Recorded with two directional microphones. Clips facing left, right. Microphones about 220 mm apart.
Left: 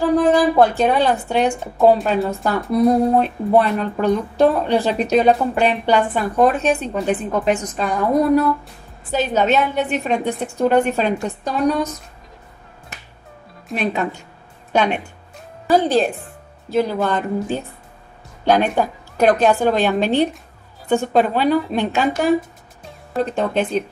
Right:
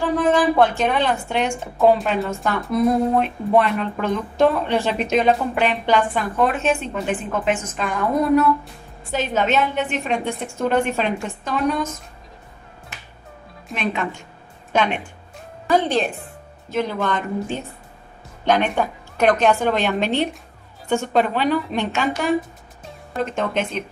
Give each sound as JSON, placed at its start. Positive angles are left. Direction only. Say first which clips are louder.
{"t": 0.2, "sound": "speech", "louder": "even", "side_deg": 35}
{"t": 2.7, "sound": "speech", "louder": "left 3 dB", "side_deg": 35}
{"t": 13.7, "sound": "speech", "louder": "left 3 dB", "side_deg": 40}